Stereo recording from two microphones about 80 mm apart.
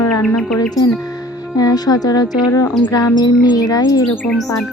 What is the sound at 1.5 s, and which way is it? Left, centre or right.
Speech, left.